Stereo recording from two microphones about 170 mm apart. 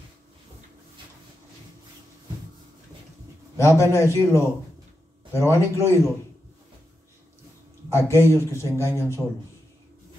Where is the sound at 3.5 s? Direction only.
15° left (ahead or behind).